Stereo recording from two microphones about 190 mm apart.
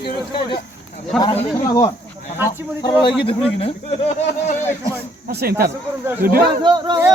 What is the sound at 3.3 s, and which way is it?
Speech, 30° left (ahead or behind).